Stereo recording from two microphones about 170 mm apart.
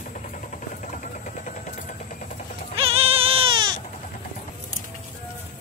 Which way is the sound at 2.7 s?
35° right (ahead or behind).